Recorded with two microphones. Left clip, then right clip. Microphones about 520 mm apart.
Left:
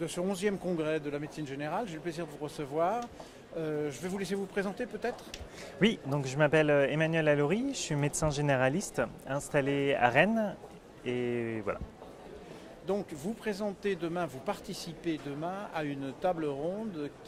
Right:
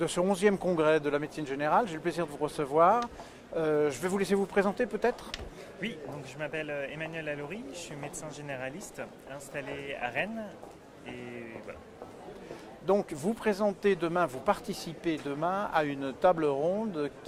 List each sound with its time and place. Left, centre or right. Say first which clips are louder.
0.0 s speech: right 6 dB; right
5.8 s speech: left 9 dB; left
12.9 s speech: right 6 dB; right